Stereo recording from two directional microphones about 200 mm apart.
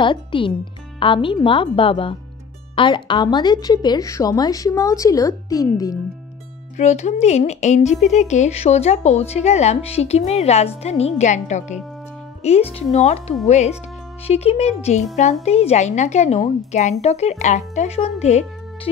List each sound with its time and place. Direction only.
0.0 s a woman's voice: 25° left (ahead or behind)
6.8 s a woman's voice: 35° left (ahead or behind)